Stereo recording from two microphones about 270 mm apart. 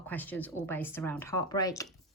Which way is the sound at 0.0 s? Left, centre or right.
Centre.